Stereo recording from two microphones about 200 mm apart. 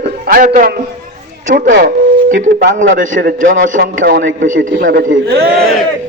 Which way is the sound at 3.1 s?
45° right (ahead or behind).